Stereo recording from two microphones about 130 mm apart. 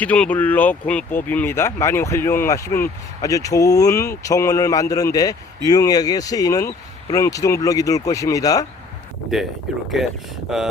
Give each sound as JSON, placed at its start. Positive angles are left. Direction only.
{"t": 0.0, "sound": "speech", "side_deg": 10}
{"t": 10.5, "sound": "speech", "side_deg": 0}